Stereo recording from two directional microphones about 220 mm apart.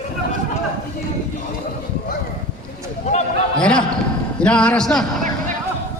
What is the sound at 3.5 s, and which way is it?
Basketball bounce, 5° left (ahead or behind).